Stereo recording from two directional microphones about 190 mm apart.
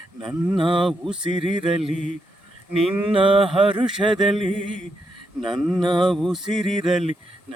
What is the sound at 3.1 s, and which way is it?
Music, 30° right (ahead or behind).